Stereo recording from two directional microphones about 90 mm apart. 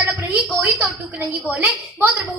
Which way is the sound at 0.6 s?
20° right (ahead or behind).